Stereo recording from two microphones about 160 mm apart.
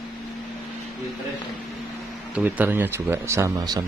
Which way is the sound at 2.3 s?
10° right (ahead or behind).